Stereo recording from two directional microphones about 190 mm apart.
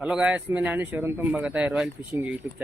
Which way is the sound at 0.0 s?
5° right (ahead or behind).